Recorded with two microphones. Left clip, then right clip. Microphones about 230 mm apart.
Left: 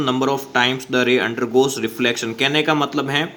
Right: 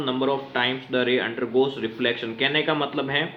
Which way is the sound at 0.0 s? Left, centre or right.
Left.